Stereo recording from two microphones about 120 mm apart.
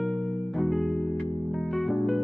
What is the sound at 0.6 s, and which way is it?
Music, centre (ahead or behind).